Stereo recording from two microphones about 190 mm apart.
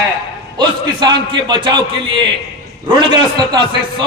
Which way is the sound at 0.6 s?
25° right (ahead or behind).